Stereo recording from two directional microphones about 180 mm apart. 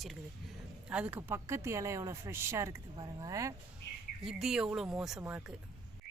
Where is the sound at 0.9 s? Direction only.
5° right (ahead or behind).